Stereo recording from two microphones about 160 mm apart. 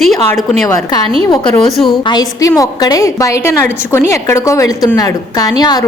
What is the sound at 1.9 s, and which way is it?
A woman's voice, 25° left (ahead or behind).